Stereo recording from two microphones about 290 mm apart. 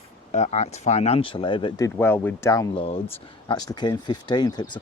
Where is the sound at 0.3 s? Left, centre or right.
Left.